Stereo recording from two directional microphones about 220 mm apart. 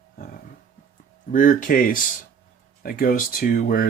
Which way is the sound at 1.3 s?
40° left (ahead or behind).